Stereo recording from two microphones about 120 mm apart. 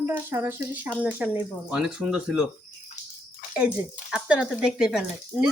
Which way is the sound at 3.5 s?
10° right (ahead or behind).